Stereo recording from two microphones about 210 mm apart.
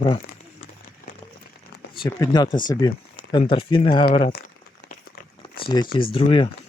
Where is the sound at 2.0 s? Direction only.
20° left (ahead or behind).